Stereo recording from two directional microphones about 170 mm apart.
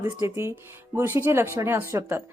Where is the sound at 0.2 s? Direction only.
15° right (ahead or behind).